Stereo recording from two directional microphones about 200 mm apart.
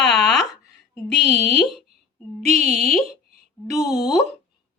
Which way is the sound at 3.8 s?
20° left (ahead or behind).